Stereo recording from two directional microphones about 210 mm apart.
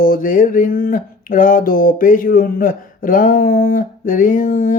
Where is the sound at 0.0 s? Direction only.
40° left (ahead or behind).